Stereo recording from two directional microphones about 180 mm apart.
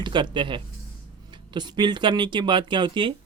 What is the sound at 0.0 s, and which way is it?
Speech, 25° right (ahead or behind).